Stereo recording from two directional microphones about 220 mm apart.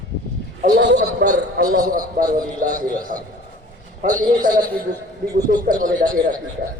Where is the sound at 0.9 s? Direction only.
35° right (ahead or behind).